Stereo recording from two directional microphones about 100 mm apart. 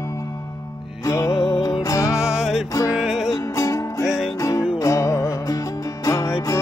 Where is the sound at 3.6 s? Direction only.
35° left (ahead or behind).